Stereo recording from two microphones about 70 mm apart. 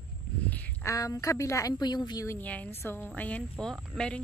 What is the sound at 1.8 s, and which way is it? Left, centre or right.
Speech, left.